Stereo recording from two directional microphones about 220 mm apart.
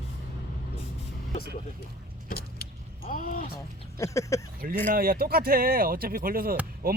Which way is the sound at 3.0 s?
40° left (ahead or behind).